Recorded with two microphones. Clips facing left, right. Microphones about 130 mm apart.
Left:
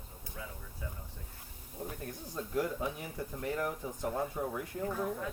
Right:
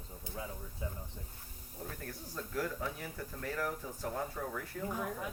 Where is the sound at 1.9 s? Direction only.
20° left (ahead or behind).